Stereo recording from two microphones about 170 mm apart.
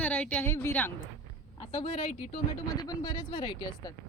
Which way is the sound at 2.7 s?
25° left (ahead or behind).